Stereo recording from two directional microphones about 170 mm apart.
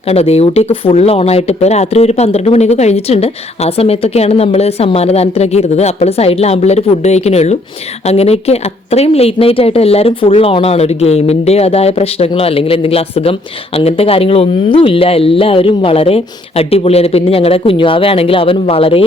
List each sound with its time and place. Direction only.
0.1 s speech: 35° left (ahead or behind)